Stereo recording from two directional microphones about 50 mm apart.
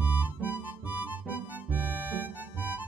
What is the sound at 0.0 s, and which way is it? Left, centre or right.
Music, right.